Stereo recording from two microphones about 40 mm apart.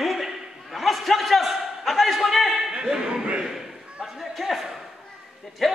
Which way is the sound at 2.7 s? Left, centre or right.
Right.